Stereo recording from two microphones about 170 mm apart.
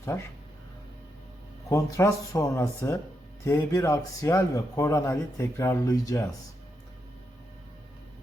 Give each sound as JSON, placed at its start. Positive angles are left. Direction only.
{"t": 1.7, "sound": "a man's voice", "side_deg": 20}